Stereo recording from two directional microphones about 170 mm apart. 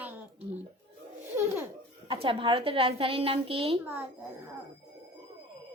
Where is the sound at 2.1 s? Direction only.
30° right (ahead or behind).